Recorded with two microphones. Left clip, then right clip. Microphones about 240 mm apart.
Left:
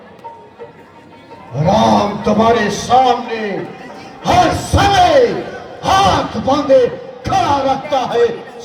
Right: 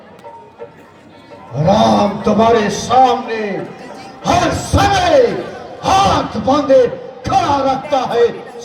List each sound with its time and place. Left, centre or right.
1.5 s a man's voice: centre
4.2 s music: centre
5.8 s a sound: centre